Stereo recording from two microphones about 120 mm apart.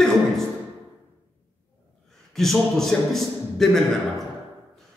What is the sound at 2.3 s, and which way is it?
A man's voice, centre (ahead or behind).